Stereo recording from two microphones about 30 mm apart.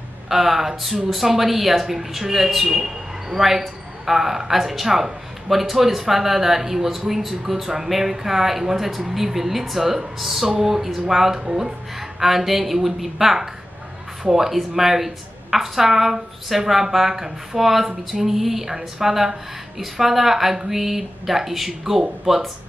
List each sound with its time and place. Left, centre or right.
0.3 s a woman's voice: centre
11.4 s speech: right
12.2 s a woman's voice: centre